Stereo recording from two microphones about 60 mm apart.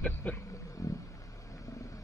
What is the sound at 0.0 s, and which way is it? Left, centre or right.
Insect, left.